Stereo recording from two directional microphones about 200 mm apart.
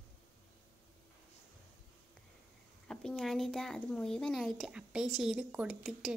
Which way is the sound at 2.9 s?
5° left (ahead or behind).